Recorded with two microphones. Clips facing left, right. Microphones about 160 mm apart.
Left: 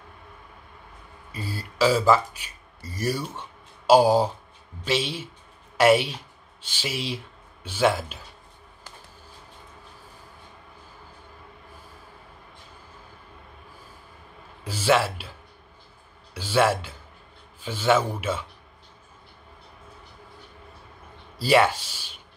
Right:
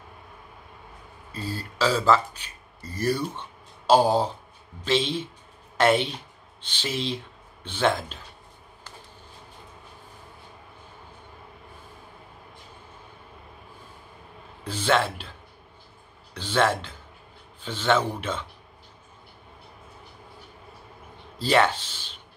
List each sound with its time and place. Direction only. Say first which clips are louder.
1.3 s speech: right 2 dB; 10° left (ahead or behind)
14.6 s speech: left 2 dB; 10° left (ahead or behind)
16.3 s speech: left 2 dB; 10° left (ahead or behind)
21.4 s speech: left 2 dB; 10° left (ahead or behind)